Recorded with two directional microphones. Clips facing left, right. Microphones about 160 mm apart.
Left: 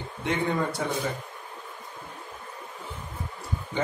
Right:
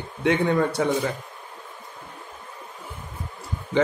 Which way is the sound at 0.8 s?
75° right (ahead or behind).